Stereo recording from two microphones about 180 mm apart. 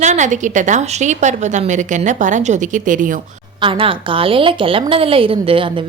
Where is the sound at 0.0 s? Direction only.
40° right (ahead or behind).